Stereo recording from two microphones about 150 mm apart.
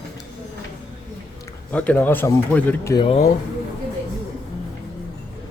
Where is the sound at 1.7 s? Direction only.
10° left (ahead or behind).